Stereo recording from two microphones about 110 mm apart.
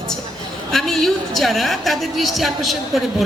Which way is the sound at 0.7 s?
5° left (ahead or behind).